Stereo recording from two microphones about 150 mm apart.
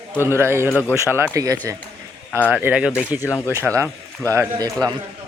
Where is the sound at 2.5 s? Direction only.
10° right (ahead or behind).